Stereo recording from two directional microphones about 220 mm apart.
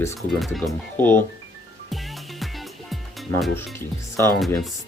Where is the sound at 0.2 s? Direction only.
Centre (ahead or behind).